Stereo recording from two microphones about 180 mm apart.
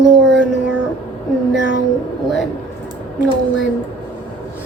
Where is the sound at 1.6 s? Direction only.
90° left.